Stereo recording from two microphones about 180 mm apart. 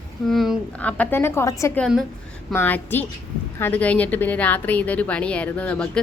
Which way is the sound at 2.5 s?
10° left (ahead or behind).